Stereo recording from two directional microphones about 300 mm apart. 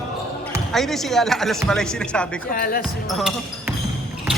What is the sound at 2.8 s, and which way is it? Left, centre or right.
Speech, centre.